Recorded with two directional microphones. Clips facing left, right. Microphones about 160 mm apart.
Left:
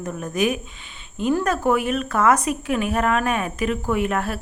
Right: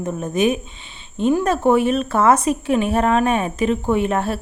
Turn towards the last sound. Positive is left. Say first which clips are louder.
# right 3 dB
turn(degrees=-30)  # may be behind; listen again after turning